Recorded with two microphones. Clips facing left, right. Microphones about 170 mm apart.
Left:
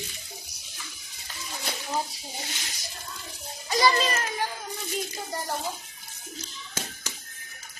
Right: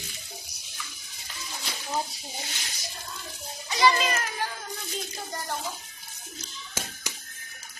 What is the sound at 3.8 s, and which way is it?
Speech, 40° left (ahead or behind).